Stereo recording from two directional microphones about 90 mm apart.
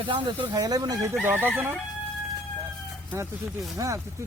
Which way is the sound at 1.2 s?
25° right (ahead or behind).